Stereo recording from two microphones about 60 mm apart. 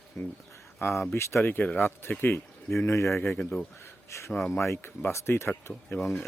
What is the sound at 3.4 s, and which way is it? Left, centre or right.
Speech, left.